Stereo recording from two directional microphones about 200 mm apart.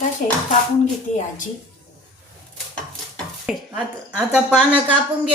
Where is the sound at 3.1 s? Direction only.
5° right (ahead or behind).